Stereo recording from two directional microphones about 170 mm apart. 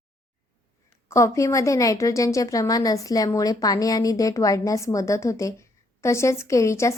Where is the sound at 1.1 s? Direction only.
15° left (ahead or behind).